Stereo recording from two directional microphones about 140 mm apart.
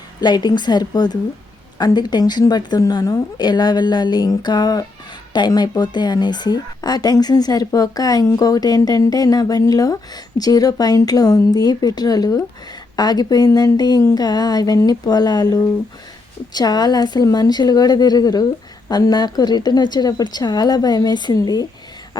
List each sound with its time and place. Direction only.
0.2 s a woman's voice: 30° left (ahead or behind)
22.1 s beatboxing: 30° left (ahead or behind)